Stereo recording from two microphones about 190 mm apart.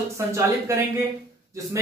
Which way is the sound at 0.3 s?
15° right (ahead or behind).